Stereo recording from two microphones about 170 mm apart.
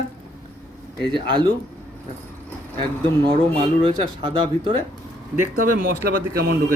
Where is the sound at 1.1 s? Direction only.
30° right (ahead or behind).